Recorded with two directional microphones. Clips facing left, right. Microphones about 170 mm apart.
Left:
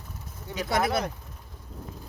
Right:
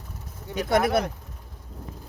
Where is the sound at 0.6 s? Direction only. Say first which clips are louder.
Right 4 dB; 55° right (ahead or behind).